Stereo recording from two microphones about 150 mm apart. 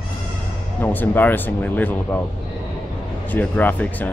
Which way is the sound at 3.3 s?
10° left (ahead or behind).